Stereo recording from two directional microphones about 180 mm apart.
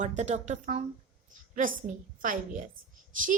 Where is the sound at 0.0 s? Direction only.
40° right (ahead or behind).